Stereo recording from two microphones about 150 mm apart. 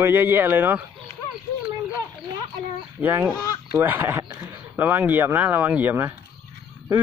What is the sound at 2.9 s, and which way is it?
Speech, 10° right (ahead or behind).